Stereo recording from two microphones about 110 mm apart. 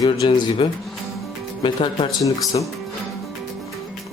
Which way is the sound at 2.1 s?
30° left (ahead or behind).